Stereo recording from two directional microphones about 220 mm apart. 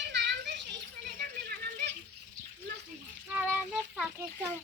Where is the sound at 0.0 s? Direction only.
50° right (ahead or behind).